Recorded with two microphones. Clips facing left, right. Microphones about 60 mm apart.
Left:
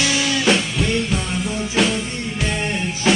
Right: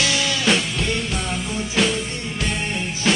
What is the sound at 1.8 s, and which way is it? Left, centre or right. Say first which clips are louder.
Music: left 2 dB; centre.